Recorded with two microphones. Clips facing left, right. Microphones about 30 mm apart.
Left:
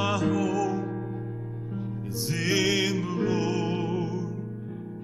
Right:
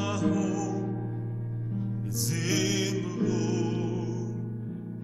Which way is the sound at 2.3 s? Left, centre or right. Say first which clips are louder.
Left 4 dB; centre.